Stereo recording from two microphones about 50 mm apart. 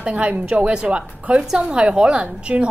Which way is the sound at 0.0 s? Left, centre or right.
Right.